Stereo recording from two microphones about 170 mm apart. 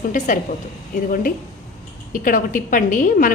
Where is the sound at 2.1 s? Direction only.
50° left (ahead or behind).